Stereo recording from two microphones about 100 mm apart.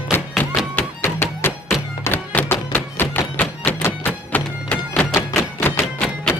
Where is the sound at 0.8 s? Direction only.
20° left (ahead or behind).